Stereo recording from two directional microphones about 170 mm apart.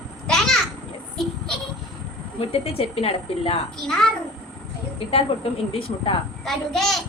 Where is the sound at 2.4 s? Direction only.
35° left (ahead or behind).